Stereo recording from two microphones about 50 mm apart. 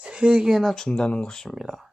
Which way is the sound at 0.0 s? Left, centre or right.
Right.